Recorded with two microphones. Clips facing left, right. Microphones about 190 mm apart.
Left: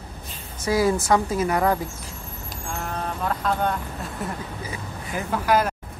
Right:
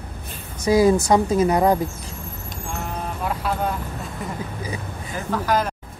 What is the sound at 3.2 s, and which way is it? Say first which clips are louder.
Speech: even; 10° right (ahead or behind).